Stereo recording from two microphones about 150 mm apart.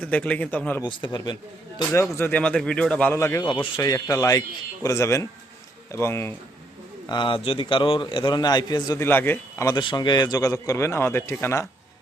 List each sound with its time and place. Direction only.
0.0 s speech: 5° left (ahead or behind)
0.9 s speech: 30° left (ahead or behind)
1.9 s speech: 15° left (ahead or behind)
3.4 s speech: 30° left (ahead or behind); by 6.3 s 15° left (ahead or behind)
7.1 s a man's voice: 35° left (ahead or behind)
9.0 s speech: 15° left (ahead or behind)
9.6 s speech: 30° left (ahead or behind)